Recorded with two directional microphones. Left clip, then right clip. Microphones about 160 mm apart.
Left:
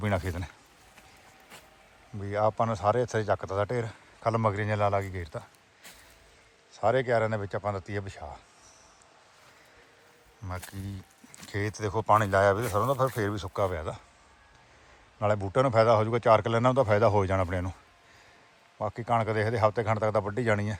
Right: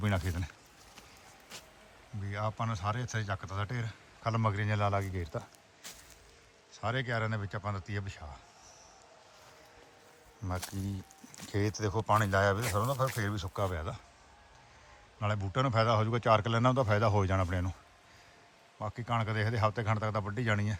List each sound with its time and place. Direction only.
0.3 s a man's voice: 15° right (ahead or behind)
2.2 s speech: centre (ahead or behind); by 5.5 s 25° right (ahead or behind)
6.7 s a man's voice: 5° right (ahead or behind)
10.7 s a man's voice: 25° right (ahead or behind)
15.2 s a man's voice: 5° right (ahead or behind)
18.8 s a man's voice: 10° right (ahead or behind)